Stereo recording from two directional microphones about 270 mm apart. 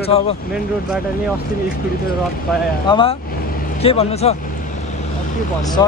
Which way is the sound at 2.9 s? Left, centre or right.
Centre.